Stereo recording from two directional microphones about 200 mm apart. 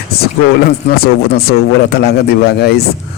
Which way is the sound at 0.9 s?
50° left (ahead or behind).